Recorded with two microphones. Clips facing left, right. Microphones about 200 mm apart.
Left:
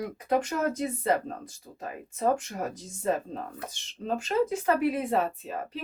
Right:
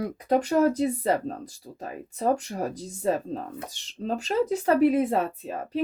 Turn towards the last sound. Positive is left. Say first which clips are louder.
# right 7 dB
turn(degrees=-35)  # may be behind; listen again after turning